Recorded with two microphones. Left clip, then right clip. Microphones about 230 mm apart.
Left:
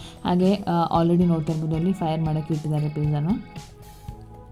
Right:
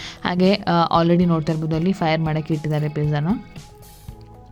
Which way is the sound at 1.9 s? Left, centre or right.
Right.